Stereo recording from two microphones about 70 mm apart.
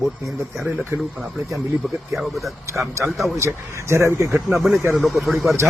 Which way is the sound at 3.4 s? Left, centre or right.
Right.